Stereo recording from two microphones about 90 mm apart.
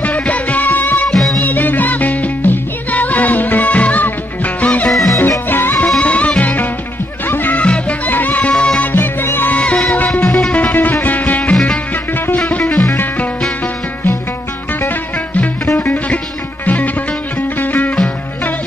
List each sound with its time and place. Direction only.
0.0 s music: 15° left (ahead or behind)
1.1 s music: 5° left (ahead or behind)
1.4 s music: 20° left (ahead or behind)
4.8 s music: centre (ahead or behind)
5.5 s music: 20° left (ahead or behind)
5.9 s music: 10° left (ahead or behind)
8.9 s music: 25° left (ahead or behind)
14.7 s music: 20° left (ahead or behind)